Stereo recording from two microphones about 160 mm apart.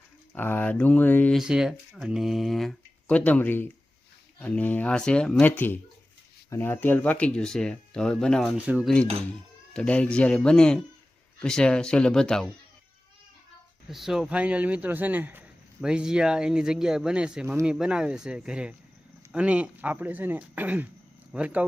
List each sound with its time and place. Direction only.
0.3 s speech: 10° left (ahead or behind)
1.4 s speech: 5° right (ahead or behind)
8.5 s speech: 10° right (ahead or behind)
9.7 s speech: 5° left (ahead or behind)
13.8 s speech: centre (ahead or behind)